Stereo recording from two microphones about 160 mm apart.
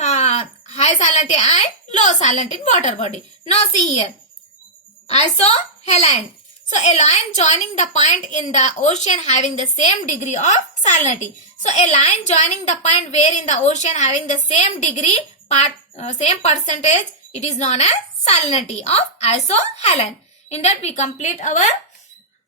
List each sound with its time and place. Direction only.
0.0 s a woman's voice: 45° left (ahead or behind)
5.0 s a woman's voice: 45° left (ahead or behind)